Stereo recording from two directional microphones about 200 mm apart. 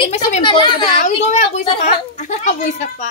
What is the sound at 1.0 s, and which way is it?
A child's voice, 35° left (ahead or behind).